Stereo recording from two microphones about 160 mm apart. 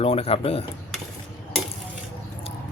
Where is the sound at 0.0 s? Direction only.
40° left (ahead or behind).